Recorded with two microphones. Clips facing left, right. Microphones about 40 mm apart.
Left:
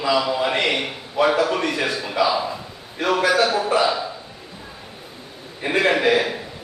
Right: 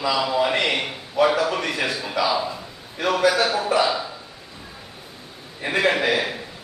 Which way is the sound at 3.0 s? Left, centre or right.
Centre.